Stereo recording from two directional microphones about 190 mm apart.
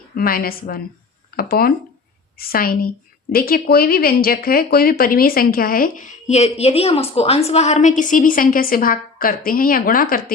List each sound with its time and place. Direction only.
0.2 s speech: 50° left (ahead or behind)